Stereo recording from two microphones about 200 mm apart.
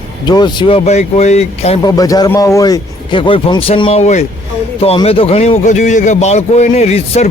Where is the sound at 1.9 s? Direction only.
20° left (ahead or behind).